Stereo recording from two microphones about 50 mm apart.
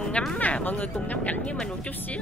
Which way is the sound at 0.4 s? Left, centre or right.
Left.